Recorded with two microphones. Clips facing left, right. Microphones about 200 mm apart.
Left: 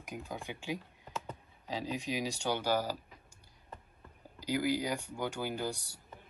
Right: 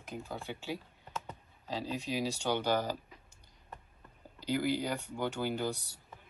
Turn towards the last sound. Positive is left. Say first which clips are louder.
# right 2 dB
turn(degrees=10)  # may be behind; listen again after turning